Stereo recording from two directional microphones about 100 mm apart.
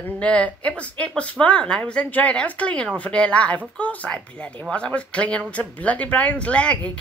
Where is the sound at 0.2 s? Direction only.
10° left (ahead or behind).